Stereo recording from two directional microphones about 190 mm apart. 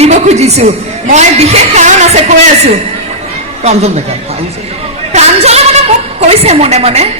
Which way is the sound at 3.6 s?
35° right (ahead or behind).